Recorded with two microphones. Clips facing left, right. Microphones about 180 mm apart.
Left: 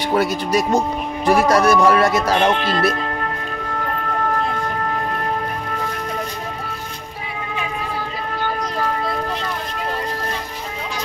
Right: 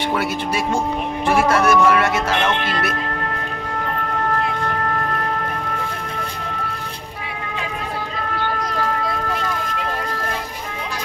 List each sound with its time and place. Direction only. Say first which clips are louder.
0.1 s speech: left 8 dB; 40° left (ahead or behind)